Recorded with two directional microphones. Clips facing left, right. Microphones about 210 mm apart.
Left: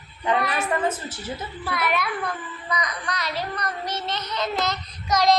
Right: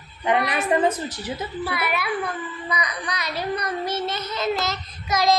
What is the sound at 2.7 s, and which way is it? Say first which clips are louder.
Child singing: left 1 dB; 10° right (ahead or behind).